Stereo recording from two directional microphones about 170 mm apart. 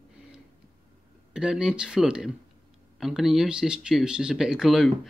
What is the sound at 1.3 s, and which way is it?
Speech, 5° right (ahead or behind).